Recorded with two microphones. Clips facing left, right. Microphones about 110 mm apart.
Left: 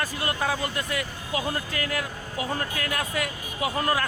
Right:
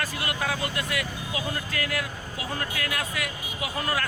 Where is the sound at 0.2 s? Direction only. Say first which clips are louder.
Left 3 dB; 30° left (ahead or behind).